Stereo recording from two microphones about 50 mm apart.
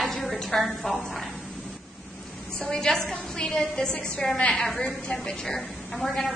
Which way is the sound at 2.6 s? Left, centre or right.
Centre.